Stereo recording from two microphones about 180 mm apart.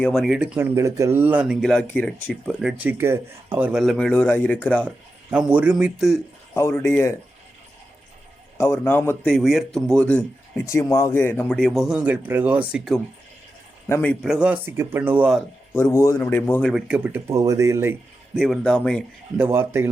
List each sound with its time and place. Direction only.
0.0 s speech: centre (ahead or behind)
2.5 s speech: 5° right (ahead or behind)
4.9 s speech: 5° right (ahead or behind)
6.5 s a man's voice: 15° left (ahead or behind)
8.5 s a man's voice: 15° left (ahead or behind)
9.3 s a man's voice: centre (ahead or behind)
13.8 s a man's voice: 10° left (ahead or behind)
14.3 s speech: 5° right (ahead or behind)
15.7 s a man's voice: 15° left (ahead or behind); by 17.9 s 15° right (ahead or behind)
18.3 s speech: centre (ahead or behind)
19.4 s speech: 10° right (ahead or behind)